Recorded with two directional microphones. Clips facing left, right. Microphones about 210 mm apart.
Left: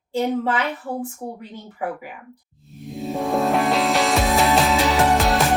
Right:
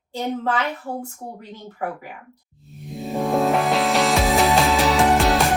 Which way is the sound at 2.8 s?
Centre (ahead or behind).